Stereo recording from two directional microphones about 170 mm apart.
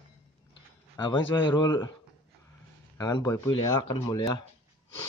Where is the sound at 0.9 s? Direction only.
25° left (ahead or behind).